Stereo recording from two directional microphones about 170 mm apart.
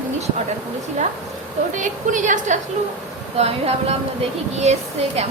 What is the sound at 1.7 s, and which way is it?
A woman's voice, 50° right (ahead or behind).